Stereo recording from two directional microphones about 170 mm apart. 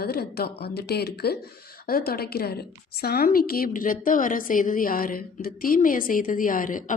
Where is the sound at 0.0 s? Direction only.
65° left (ahead or behind).